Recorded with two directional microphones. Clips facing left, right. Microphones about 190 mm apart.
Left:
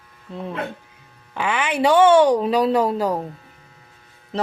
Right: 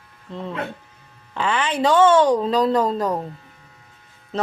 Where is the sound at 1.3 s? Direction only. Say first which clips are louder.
Even; 10° left (ahead or behind).